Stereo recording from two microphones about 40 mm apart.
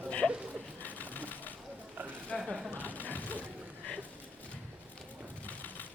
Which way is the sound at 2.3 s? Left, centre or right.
Left.